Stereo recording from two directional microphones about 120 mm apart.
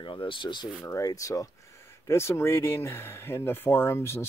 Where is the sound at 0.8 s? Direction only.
30° left (ahead or behind).